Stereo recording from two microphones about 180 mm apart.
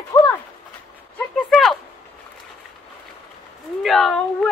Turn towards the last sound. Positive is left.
turn(degrees=0)  # may be behind; listen again after turning